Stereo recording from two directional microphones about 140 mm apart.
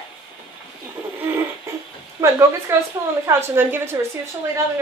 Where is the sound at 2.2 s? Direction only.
25° right (ahead or behind).